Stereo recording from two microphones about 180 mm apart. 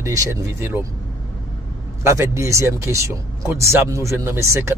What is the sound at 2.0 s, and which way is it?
Speech, 15° right (ahead or behind).